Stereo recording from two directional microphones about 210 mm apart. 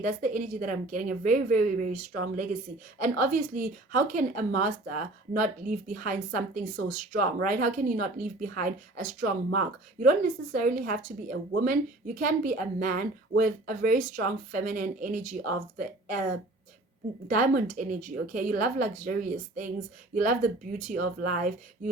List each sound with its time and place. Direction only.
0.0 s a woman's voice: 35° right (ahead or behind)
17.2 s a woman's voice: 40° right (ahead or behind)